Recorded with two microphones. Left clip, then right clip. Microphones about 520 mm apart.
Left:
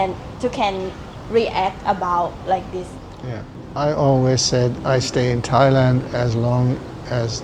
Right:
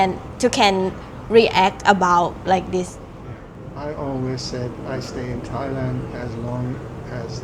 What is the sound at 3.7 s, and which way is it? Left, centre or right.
Speech, left.